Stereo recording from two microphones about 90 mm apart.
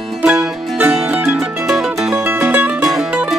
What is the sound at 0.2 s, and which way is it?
Music, 15° right (ahead or behind).